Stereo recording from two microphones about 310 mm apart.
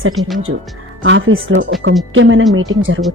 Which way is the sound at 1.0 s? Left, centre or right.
Right.